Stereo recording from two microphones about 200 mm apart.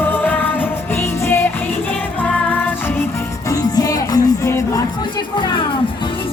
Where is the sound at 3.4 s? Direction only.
15° left (ahead or behind).